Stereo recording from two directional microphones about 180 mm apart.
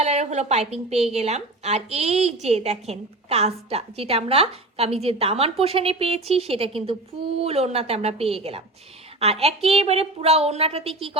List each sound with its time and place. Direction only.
0.0 s a woman's voice: 35° right (ahead or behind)